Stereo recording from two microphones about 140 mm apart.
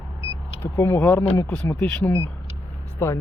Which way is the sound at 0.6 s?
15° left (ahead or behind).